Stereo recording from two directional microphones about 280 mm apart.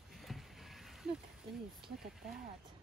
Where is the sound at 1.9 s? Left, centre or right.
Centre.